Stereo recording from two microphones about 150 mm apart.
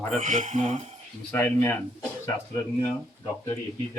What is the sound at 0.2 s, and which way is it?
Speech, 60° right (ahead or behind).